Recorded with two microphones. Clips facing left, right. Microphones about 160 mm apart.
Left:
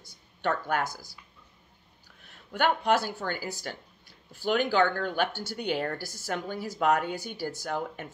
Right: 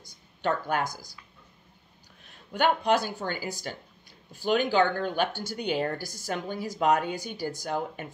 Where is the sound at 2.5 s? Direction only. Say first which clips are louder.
Right 1 dB; 15° right (ahead or behind).